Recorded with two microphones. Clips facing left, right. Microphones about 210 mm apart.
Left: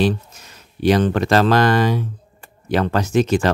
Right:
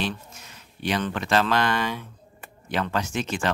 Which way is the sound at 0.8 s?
40° left (ahead or behind).